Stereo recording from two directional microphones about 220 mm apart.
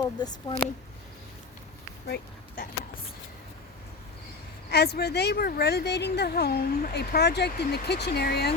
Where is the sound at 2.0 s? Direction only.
45° left (ahead or behind).